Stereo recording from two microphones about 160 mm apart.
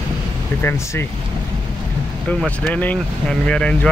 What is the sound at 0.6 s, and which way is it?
Speech, 15° left (ahead or behind).